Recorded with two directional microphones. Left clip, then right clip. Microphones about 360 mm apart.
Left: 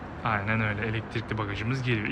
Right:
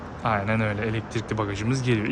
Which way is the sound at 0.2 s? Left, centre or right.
Centre.